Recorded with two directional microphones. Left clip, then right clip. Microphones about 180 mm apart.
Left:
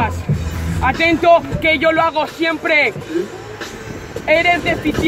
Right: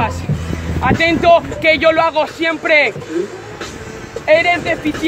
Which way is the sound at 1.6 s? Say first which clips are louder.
Right 2 dB; 10° right (ahead or behind).